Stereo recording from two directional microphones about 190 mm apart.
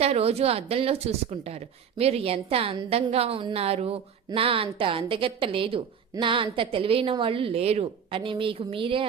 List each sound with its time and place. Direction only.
0.0 s a woman's voice: 30° right (ahead or behind)